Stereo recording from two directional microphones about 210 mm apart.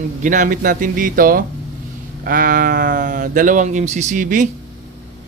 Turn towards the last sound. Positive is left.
turn(degrees=-35)  # may be behind; listen again after turning